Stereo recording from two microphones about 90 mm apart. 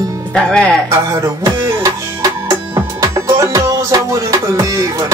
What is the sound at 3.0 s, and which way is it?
Music, 40° right (ahead or behind).